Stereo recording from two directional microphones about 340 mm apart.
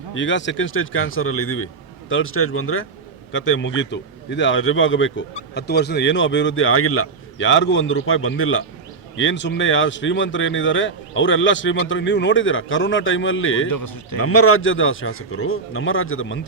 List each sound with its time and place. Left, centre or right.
0.1 s a man's voice: left
13.7 s speech: left
14.2 s a man's voice: left